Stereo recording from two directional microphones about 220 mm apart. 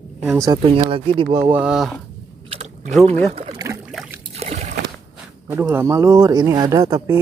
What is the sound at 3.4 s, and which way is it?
Boat, 20° right (ahead or behind).